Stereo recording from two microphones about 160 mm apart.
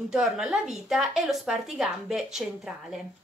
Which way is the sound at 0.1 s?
5° right (ahead or behind).